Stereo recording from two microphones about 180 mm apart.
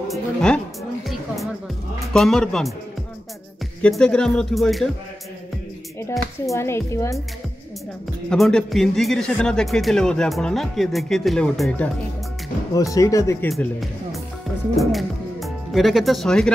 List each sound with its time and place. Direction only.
0.1 s speech: 5° left (ahead or behind)
3.8 s speech: 5° left (ahead or behind)
5.9 s speech: 15° left (ahead or behind)
8.3 s speech: 5° left (ahead or behind)
12.7 s speech: 20° left (ahead or behind)
13.5 s speech: centre (ahead or behind)